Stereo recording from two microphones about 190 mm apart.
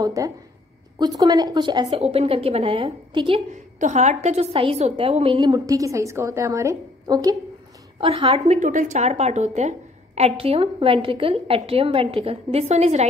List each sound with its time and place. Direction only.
0.0 s a woman's voice: 20° right (ahead or behind)
8.0 s a woman's voice: 30° right (ahead or behind)